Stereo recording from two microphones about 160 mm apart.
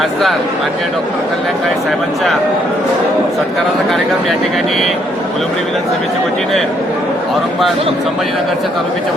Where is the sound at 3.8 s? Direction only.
Centre (ahead or behind).